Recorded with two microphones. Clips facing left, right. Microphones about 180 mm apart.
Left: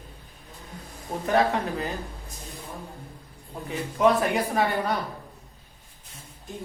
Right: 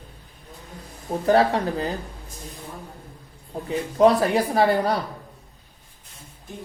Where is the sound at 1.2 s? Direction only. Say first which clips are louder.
Right 4 dB; 35° right (ahead or behind).